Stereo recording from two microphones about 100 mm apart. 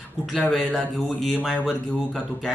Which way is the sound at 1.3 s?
10° right (ahead or behind).